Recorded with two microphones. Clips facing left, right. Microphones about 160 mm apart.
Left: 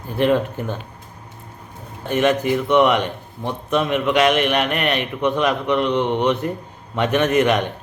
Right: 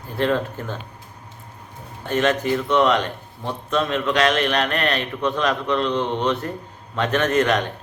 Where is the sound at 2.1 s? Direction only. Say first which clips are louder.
Left 2 dB; 15° left (ahead or behind).